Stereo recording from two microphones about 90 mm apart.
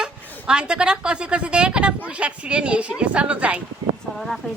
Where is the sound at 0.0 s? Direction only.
10° right (ahead or behind).